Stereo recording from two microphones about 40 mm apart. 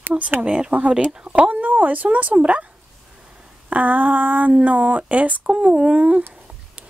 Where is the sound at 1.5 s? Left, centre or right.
Right.